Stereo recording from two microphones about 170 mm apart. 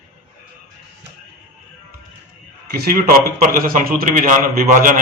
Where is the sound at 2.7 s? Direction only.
60° right (ahead or behind).